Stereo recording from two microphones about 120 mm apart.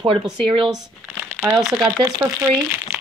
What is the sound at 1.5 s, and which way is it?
Speech, centre (ahead or behind).